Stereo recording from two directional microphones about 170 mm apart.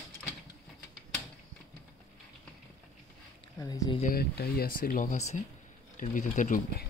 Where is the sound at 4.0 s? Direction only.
60° left (ahead or behind).